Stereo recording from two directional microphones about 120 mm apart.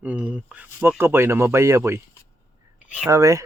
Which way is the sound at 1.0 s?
20° right (ahead or behind).